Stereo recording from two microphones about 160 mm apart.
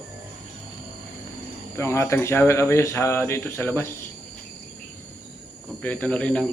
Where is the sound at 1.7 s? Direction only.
20° left (ahead or behind).